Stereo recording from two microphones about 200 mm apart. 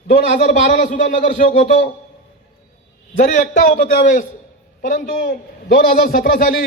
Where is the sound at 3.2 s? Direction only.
40° left (ahead or behind).